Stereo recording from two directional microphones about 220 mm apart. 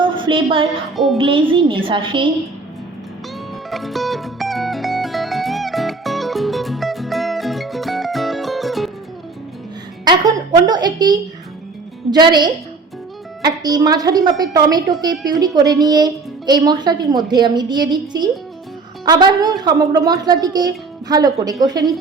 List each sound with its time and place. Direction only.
0.0 s a sound: 20° right (ahead or behind)
0.9 s speech: centre (ahead or behind)
1.2 s a woman's voice: 25° right (ahead or behind)
3.7 s music: centre (ahead or behind)
10.0 s a woman's voice: 20° right (ahead or behind)